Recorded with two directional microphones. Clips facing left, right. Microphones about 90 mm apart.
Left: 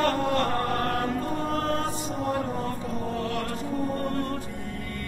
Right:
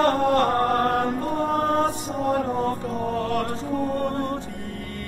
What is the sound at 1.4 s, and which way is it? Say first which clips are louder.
Music: right 7 dB; 55° right (ahead or behind).